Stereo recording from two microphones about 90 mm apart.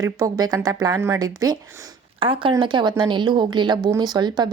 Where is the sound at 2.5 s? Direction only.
60° right (ahead or behind).